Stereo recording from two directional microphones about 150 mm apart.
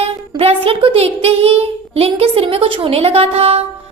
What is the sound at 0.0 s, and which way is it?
A woman's voice, 40° right (ahead or behind).